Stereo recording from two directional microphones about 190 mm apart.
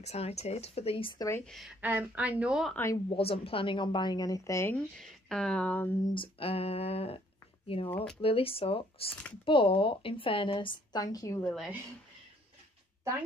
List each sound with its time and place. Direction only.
0.0 s speech: 35° left (ahead or behind)
1.4 s speech: centre (ahead or behind)
1.8 s a woman's voice: 10° right (ahead or behind)
2.7 s a woman's voice: 15° left (ahead or behind)
3.2 s a woman's voice: 30° left (ahead or behind); by 5.9 s 5° left (ahead or behind)
6.1 s speech: 30° left (ahead or behind)
7.9 s speech: 5° left (ahead or behind)
8.2 s a woman's voice: 30° left (ahead or behind)
11.4 s speech: centre (ahead or behind)